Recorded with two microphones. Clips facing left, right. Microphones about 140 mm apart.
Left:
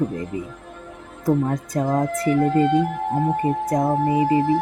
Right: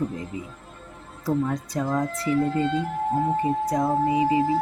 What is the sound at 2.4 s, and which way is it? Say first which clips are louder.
Speech: left 7 dB; 70° left (ahead or behind).